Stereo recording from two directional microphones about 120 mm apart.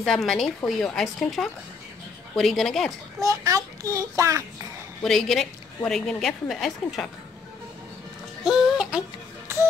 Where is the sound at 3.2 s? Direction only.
30° right (ahead or behind).